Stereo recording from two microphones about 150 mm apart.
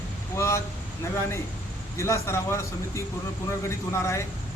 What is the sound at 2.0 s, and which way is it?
A man's voice, 20° left (ahead or behind).